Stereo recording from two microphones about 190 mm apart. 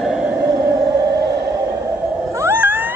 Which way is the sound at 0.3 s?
15° right (ahead or behind).